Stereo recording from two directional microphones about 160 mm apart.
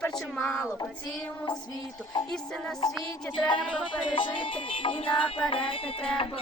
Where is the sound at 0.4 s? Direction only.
20° left (ahead or behind).